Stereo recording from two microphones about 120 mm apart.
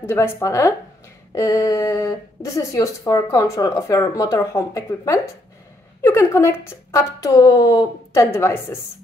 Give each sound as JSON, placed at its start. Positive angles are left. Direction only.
{"t": 0.0, "sound": "speech", "side_deg": 20}